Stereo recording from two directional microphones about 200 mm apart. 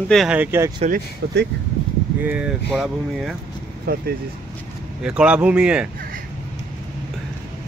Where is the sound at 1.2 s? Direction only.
60° right (ahead or behind).